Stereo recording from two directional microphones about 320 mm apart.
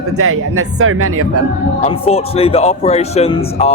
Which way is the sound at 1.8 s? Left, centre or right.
Centre.